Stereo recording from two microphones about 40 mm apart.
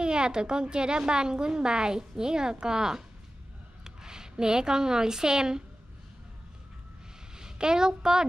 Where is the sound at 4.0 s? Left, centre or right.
Centre.